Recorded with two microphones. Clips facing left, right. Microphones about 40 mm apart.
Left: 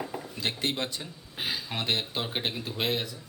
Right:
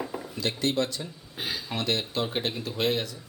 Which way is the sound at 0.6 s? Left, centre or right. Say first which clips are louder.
Right 4 dB; left.